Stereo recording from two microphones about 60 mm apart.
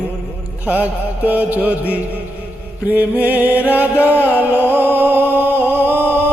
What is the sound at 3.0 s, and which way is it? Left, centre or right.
Music, right.